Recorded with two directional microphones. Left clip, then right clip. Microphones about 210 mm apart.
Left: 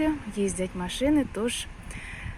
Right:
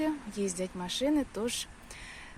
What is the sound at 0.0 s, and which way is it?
Speech, 5° right (ahead or behind).